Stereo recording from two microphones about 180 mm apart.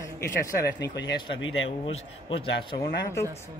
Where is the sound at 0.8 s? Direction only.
75° left (ahead or behind).